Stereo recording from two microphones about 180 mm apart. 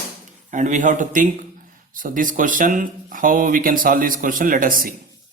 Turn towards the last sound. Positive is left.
turn(degrees=-50)  # may be behind; listen again after turning